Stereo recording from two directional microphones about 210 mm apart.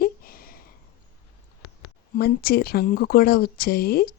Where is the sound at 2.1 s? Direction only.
45° left (ahead or behind).